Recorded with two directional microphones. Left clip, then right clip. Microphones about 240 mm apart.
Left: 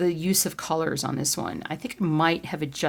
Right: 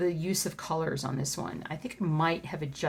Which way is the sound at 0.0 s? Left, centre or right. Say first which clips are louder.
Left 5 dB; left.